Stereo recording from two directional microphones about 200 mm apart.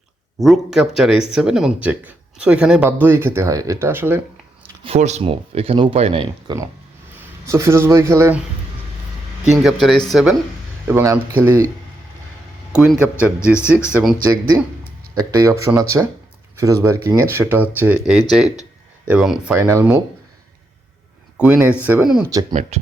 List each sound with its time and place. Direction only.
0.3 s speech: centre (ahead or behind)
4.8 s speech: 30° right (ahead or behind)
7.2 s speech: 15° right (ahead or behind)
9.5 s speech: centre (ahead or behind)
10.8 s speech: 15° right (ahead or behind)
12.7 s speech: 5° right (ahead or behind)
15.1 s speech: 20° right (ahead or behind)
19.5 s speech: 15° right (ahead or behind)
21.3 s speech: 5° right (ahead or behind)
22.2 s speech: 15° right (ahead or behind)
22.7 s speech: 30° right (ahead or behind)